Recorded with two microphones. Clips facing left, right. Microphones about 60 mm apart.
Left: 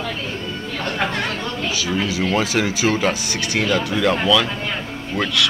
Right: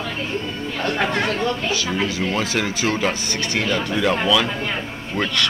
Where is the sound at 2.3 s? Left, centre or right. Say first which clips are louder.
Left 3 dB; centre.